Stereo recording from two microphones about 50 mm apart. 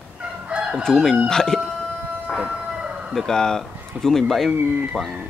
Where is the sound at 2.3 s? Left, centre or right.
Centre.